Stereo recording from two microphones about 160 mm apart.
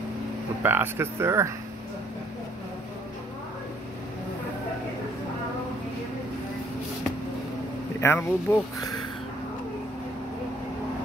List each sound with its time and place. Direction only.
0.6 s speech: 15° right (ahead or behind)
8.0 s speech: 15° left (ahead or behind)